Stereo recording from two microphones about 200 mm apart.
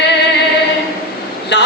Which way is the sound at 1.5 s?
60° left (ahead or behind).